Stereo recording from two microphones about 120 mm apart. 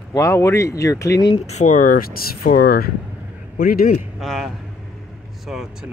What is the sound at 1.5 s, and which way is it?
Speech, 80° left.